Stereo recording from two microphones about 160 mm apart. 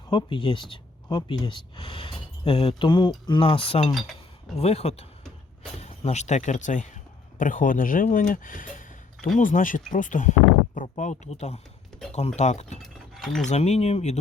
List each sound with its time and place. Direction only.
0.1 s speech: 30° left (ahead or behind)
3.9 s chink: centre (ahead or behind)
4.5 s speech: 40° left (ahead or behind)
13.1 s a sound: centre (ahead or behind)
13.4 s speech: 45° left (ahead or behind)